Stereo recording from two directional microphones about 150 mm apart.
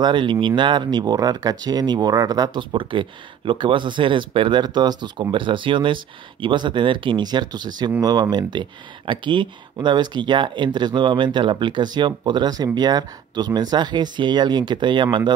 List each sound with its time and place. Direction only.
0.0 s speech: 30° right (ahead or behind)